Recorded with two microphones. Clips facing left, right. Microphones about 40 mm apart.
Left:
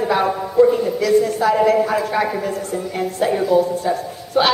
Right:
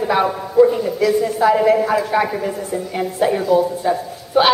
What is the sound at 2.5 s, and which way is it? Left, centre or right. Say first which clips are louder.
A woman's voice: even; centre.